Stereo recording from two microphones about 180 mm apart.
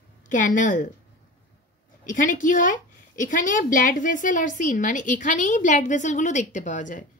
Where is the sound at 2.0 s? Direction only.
45° left (ahead or behind).